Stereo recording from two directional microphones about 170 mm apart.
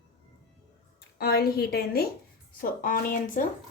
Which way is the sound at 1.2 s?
65° left (ahead or behind).